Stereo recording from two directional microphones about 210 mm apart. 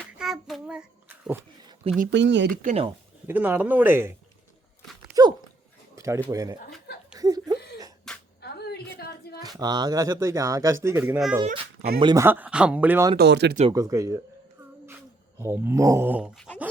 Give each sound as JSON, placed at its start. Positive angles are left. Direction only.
{"t": 0.0, "sound": "child singing", "side_deg": 0}
{"t": 2.0, "sound": "speech", "side_deg": -60}
{"t": 2.5, "sound": "speech", "side_deg": -35}
{"t": 3.2, "sound": "speech", "side_deg": -10}
{"t": 5.2, "sound": "speech", "side_deg": -15}
{"t": 7.2, "sound": "chuckle", "side_deg": -20}
{"t": 8.4, "sound": "a sound", "side_deg": 50}
{"t": 9.4, "sound": "speech", "side_deg": -20}
{"t": 11.9, "sound": "speech", "side_deg": -20}
{"t": 13.1, "sound": "speech", "side_deg": -55}
{"t": 13.7, "sound": "speech", "side_deg": -15}
{"t": 15.4, "sound": "speech", "side_deg": -10}